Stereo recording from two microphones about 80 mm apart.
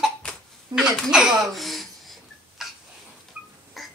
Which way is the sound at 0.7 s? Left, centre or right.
Right.